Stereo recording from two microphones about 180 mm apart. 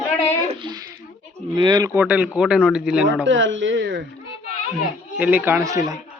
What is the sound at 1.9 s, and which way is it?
Speech, 10° right (ahead or behind).